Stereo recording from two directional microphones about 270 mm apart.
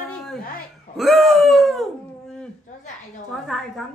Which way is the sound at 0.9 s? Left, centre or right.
Centre.